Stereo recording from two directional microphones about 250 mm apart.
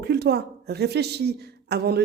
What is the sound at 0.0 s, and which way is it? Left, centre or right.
Speech, right.